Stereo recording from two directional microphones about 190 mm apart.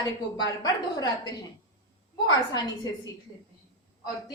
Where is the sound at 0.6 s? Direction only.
20° left (ahead or behind).